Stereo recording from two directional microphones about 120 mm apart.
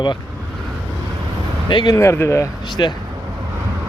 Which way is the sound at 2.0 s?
20° left (ahead or behind).